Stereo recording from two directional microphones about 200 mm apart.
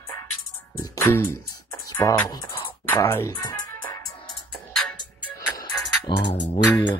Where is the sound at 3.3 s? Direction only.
20° left (ahead or behind).